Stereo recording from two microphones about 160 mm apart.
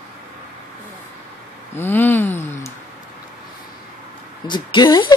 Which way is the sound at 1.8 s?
15° left (ahead or behind).